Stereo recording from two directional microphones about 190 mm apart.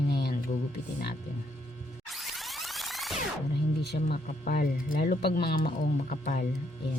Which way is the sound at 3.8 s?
60° left (ahead or behind).